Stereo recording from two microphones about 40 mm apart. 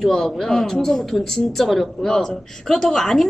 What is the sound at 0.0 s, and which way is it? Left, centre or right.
A woman's voice, centre.